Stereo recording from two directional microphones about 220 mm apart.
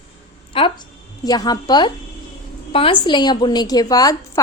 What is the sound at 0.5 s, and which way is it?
A woman's voice, 25° left (ahead or behind).